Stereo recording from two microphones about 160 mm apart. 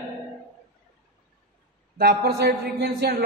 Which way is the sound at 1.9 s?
75° right (ahead or behind).